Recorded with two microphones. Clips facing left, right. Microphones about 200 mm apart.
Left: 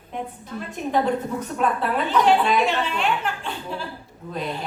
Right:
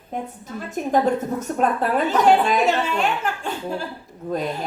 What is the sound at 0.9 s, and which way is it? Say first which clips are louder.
A woman's voice: right 2 dB; 45° right (ahead or behind).